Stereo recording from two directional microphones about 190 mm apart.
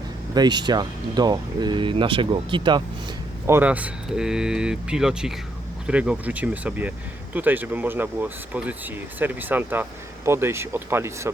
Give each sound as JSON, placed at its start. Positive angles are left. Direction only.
{"t": 0.3, "sound": "speech", "side_deg": -25}
{"t": 3.4, "sound": "speech", "side_deg": -10}